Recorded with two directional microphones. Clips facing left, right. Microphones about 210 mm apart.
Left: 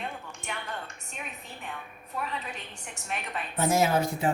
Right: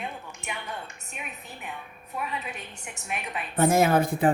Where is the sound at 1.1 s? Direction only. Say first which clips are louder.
Right 1 dB; 10° right (ahead or behind).